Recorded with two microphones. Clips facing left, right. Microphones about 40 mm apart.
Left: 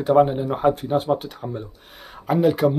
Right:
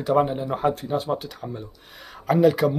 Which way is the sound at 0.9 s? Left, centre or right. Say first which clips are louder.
Left 4 dB; left.